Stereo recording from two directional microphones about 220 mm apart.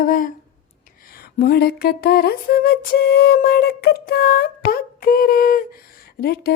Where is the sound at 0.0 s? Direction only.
40° left (ahead or behind).